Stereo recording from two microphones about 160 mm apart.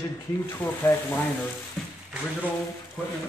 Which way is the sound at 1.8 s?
5° left (ahead or behind).